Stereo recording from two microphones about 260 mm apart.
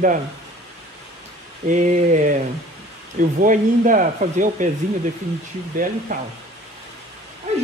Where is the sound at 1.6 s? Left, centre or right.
Right.